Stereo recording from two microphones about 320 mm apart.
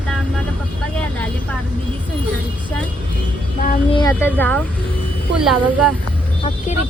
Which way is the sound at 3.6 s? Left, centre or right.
Left.